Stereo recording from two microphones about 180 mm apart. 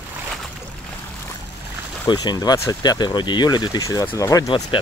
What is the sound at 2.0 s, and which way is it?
Speech, 20° left (ahead or behind).